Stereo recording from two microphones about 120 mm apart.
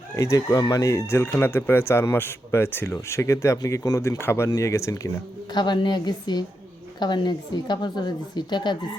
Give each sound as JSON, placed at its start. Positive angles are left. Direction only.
{"t": 0.2, "sound": "speech", "side_deg": 25}
{"t": 5.5, "sound": "a woman's voice", "side_deg": 40}